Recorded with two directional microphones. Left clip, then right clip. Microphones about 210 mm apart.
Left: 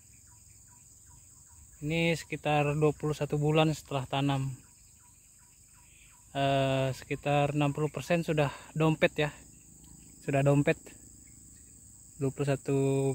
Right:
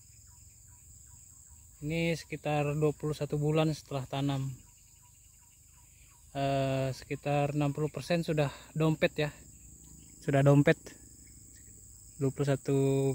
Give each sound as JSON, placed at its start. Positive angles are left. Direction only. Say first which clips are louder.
{"t": 1.9, "sound": "speech", "louder": "left 3 dB", "side_deg": 5}
{"t": 6.3, "sound": "speech", "louder": "left 3 dB", "side_deg": 5}
{"t": 10.2, "sound": "speech", "louder": "right 1 dB", "side_deg": -20}
{"t": 12.2, "sound": "speech", "louder": "even", "side_deg": -10}